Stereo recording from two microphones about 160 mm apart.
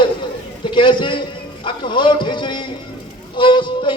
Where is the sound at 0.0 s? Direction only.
30° left (ahead or behind).